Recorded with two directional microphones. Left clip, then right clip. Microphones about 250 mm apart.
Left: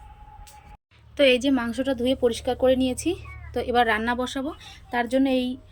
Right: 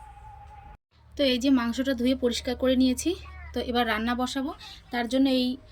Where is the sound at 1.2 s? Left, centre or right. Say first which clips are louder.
Left 5 dB; centre.